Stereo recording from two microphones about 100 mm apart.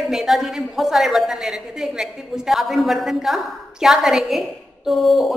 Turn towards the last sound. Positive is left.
turn(degrees=0)  # may be behind; listen again after turning